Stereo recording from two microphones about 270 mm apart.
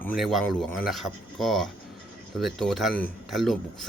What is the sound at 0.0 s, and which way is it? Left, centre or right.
Speech, centre.